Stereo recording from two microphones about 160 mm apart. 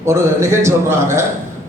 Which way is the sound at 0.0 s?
15° right (ahead or behind).